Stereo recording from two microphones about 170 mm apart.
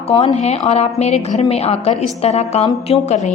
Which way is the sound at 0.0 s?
35° left (ahead or behind).